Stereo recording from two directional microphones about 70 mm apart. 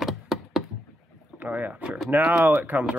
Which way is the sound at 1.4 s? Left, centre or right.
Right.